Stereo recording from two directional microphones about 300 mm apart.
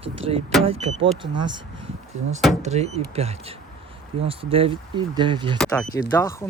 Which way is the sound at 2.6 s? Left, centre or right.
Right.